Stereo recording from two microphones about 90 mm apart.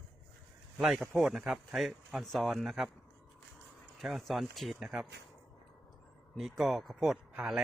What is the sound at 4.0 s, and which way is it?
Speech, centre (ahead or behind).